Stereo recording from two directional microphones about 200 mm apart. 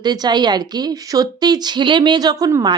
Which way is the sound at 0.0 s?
20° right (ahead or behind).